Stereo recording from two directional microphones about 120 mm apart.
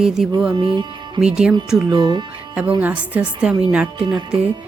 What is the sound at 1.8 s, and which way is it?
Speech, 35° right (ahead or behind).